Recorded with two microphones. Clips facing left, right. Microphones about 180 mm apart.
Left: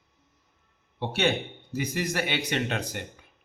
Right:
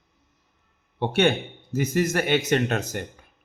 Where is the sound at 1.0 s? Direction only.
55° right (ahead or behind).